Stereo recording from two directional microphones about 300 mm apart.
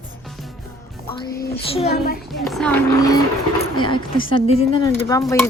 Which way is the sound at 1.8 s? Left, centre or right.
Left.